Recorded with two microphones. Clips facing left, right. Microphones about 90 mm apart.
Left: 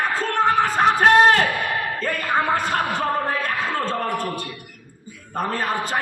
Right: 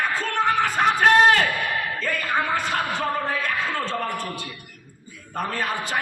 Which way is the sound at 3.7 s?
45° left (ahead or behind).